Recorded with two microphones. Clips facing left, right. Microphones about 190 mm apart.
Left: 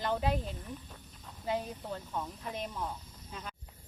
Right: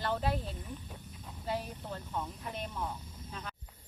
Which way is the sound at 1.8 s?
Centre (ahead or behind).